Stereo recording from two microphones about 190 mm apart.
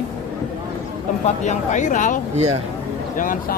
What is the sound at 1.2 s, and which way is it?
Speech, 40° left (ahead or behind).